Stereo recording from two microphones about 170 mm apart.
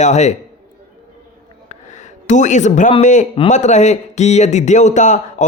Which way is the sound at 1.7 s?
45° left (ahead or behind).